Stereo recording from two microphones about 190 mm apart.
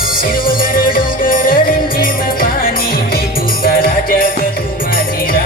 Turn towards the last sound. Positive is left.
turn(degrees=50)  # may be behind; listen again after turning